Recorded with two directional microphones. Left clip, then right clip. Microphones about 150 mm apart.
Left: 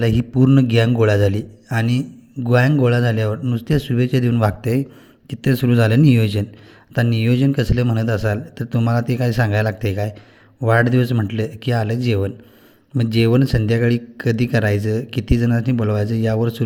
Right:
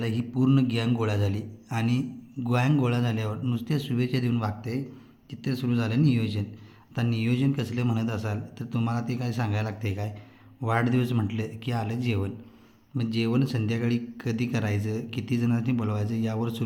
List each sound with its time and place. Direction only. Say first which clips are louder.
0.0 s a man's voice: left 10 dB; 45° left (ahead or behind)
4.4 s a man's voice: left 12 dB; 60° left (ahead or behind); by 16.6 s 40° left (ahead or behind)